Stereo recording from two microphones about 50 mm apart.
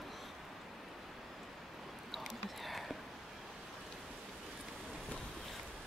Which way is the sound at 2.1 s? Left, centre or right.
Centre.